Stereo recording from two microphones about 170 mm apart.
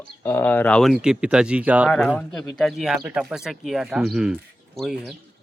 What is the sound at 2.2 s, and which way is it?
Speech, 5° left (ahead or behind).